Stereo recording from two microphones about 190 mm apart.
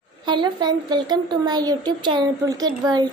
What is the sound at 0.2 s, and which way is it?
A child's voice, 25° right (ahead or behind).